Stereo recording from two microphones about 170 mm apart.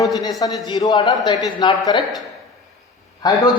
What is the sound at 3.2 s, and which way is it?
Speech, 20° left (ahead or behind).